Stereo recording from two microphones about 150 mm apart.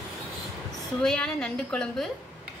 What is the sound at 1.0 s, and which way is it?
Speech, 5° left (ahead or behind).